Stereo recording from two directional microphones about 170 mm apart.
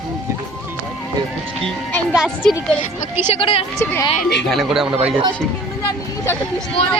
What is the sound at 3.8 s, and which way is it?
Speech, 15° left (ahead or behind).